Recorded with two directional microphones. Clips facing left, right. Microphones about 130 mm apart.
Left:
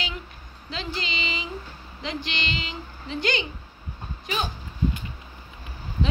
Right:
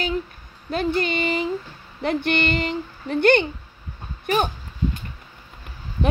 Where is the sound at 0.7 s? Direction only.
55° right (ahead or behind).